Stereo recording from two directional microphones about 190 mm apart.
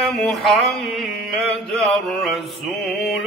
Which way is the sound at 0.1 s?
Centre (ahead or behind).